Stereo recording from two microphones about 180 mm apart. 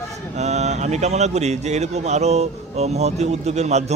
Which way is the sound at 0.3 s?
40° right (ahead or behind).